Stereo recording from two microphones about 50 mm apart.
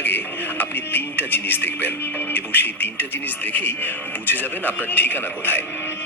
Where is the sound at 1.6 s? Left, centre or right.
Left.